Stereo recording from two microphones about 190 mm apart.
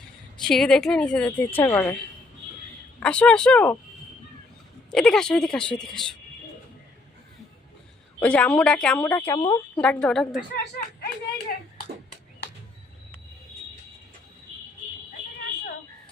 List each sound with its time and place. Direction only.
0.4 s a woman's voice: centre (ahead or behind)
3.0 s speech: 5° left (ahead or behind)
4.9 s speech: 5° left (ahead or behind)
8.2 s a woman's voice: 5° left (ahead or behind)
10.5 s speech: 60° left (ahead or behind)